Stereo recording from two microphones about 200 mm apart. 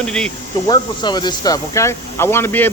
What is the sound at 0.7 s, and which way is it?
Speech, 20° left (ahead or behind).